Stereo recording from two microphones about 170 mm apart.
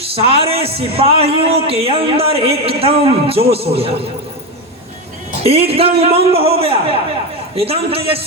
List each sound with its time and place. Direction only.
0.0 s a man's voice: 35° right (ahead or behind)
5.5 s a man's voice: 35° right (ahead or behind)